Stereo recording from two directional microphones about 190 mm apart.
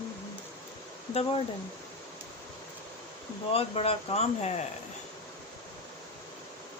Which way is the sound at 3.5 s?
30° left (ahead or behind).